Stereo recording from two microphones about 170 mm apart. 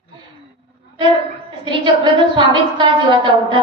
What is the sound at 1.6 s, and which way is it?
A woman's voice, 30° right (ahead or behind).